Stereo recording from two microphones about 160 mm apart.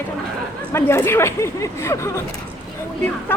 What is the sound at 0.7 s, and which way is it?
A woman's voice, 15° left (ahead or behind).